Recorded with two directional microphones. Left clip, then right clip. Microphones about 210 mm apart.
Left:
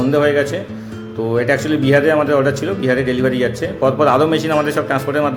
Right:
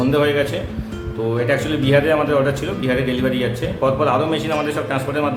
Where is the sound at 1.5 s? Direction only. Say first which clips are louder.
Left 3 dB; 25° left (ahead or behind).